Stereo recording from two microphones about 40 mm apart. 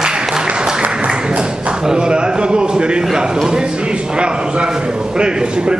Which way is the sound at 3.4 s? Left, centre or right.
Centre.